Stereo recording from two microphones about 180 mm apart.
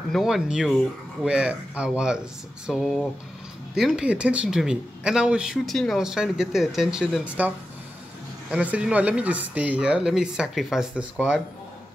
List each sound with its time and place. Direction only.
0.1 s speech: centre (ahead or behind)